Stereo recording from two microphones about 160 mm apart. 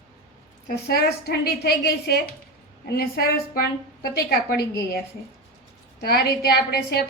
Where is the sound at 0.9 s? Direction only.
75° left (ahead or behind).